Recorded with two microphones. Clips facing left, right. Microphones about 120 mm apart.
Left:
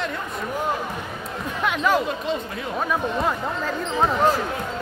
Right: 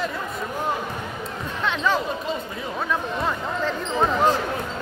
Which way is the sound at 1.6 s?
10° left (ahead or behind).